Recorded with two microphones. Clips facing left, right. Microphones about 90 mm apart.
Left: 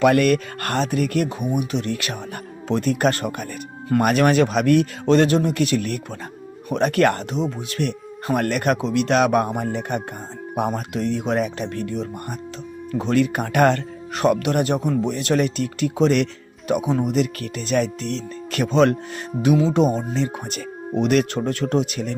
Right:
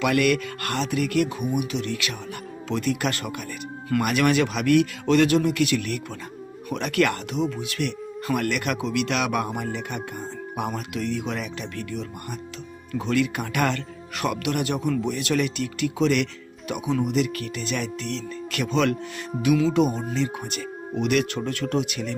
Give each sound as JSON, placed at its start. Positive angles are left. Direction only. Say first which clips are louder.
{"t": 0.0, "sound": "speech", "louder": "left 5 dB", "side_deg": 40}